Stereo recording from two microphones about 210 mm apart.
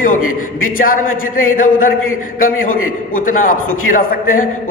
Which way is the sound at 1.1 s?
80° left.